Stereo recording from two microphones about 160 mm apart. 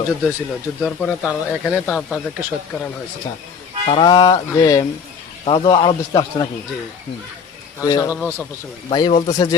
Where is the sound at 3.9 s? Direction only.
30° left (ahead or behind).